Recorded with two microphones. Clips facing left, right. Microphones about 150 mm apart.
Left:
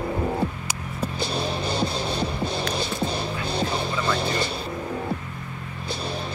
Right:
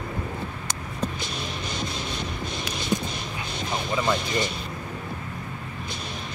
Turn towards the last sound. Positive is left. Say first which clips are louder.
# left 5 dB
turn(degrees=35)  # may be behind; listen again after turning